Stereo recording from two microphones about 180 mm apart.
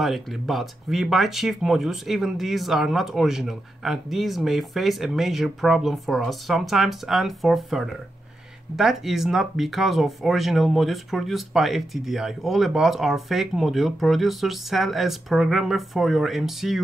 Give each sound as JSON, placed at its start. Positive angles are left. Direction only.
{"t": 0.0, "sound": "speech", "side_deg": 0}